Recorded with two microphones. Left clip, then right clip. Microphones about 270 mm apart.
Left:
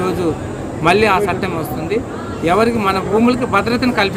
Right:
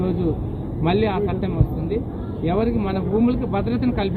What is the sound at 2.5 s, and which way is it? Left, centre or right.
Speech, left.